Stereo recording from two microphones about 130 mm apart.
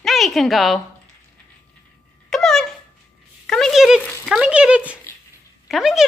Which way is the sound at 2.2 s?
5° left (ahead or behind).